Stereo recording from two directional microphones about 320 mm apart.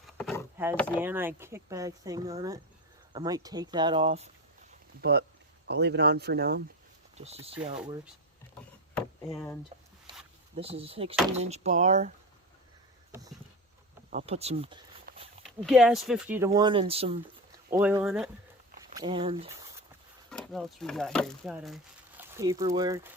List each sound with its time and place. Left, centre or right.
0.2 s vehicle: centre
0.8 s speech: centre
4.9 s speech: right
7.2 s speech: centre
9.0 s a sound: centre
10.6 s speech: centre
13.1 s a sound: centre
14.1 s speech: right
15.4 s speech: centre
17.7 s speech: centre
18.9 s speech: centre
20.3 s speech: centre